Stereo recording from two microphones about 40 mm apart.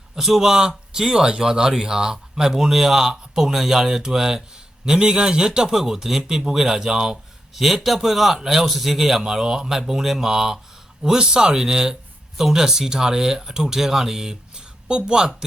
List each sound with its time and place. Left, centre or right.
0.2 s speech: centre
7.5 s speech: centre; by 15.3 s right